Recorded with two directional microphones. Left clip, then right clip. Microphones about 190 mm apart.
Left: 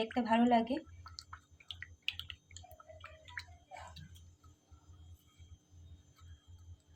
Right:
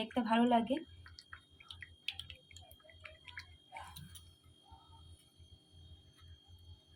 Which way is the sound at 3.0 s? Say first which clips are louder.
Left 2 dB; 20° left (ahead or behind).